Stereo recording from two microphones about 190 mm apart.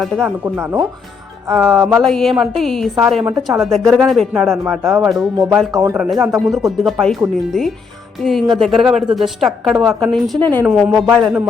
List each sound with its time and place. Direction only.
0.0 s a woman's voice: centre (ahead or behind)
0.4 s chopping: 10° right (ahead or behind)
1.5 s a woman's voice: centre (ahead or behind)
1.8 s chopping: 20° right (ahead or behind)
2.0 s a woman's voice: centre (ahead or behind)
5.7 s chopping: 20° right (ahead or behind)
6.0 s a woman's voice: 5° right (ahead or behind)